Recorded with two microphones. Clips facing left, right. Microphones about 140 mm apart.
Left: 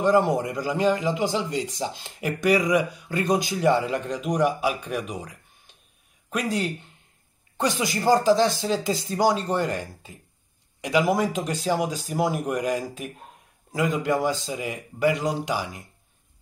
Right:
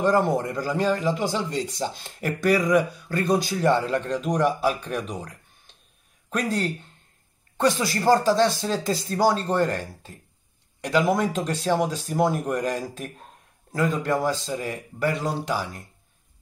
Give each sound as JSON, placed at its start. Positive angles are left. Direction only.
{"t": 0.0, "sound": "a man's voice", "side_deg": 15}
{"t": 8.1, "sound": "a man's voice", "side_deg": 15}